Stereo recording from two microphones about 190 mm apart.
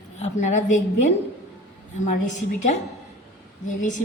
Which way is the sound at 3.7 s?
40° left (ahead or behind).